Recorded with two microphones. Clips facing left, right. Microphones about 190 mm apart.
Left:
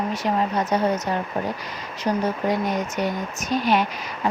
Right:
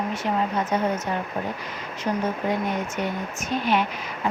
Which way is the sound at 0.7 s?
40° left (ahead or behind).